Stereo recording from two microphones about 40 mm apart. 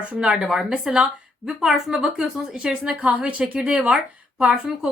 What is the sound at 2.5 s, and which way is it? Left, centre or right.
Speech, right.